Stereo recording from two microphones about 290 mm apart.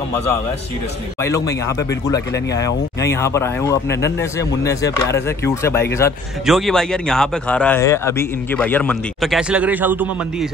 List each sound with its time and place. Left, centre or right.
1.2 s speech: centre